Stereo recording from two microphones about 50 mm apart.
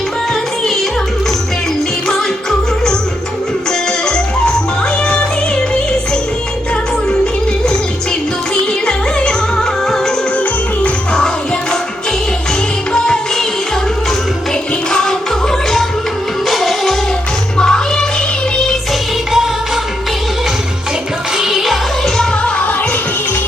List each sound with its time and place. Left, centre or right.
2.0 s music: centre
8.9 s music: centre
12.9 s music: centre
14.8 s music: centre
16.5 s music: centre
17.6 s music: centre
19.3 s music: centre
21.3 s music: centre